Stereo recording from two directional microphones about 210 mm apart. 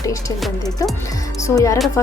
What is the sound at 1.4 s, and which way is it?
Speech, 15° left (ahead or behind).